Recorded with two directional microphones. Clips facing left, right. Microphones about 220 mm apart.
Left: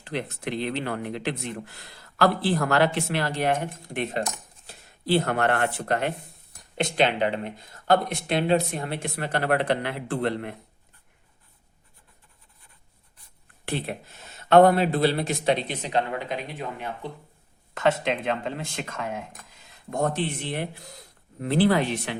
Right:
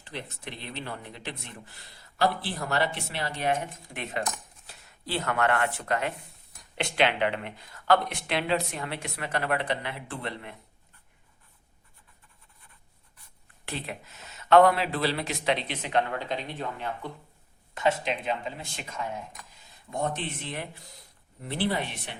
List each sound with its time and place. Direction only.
0.0 s speech: 80° left; by 3.7 s 60° left (ahead or behind)
5.2 s speech: 40° left (ahead or behind)
7.9 s speech: 45° left (ahead or behind)
9.6 s speech: 55° left (ahead or behind)
13.7 s speech: 55° left (ahead or behind)
15.9 s speech: 30° left (ahead or behind)
16.1 s speech: 10° left (ahead or behind)
17.7 s speech: 80° left
19.9 s speech: 45° left (ahead or behind)
21.3 s speech: 90° left